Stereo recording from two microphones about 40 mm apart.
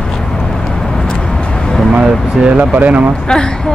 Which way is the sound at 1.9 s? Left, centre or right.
Right.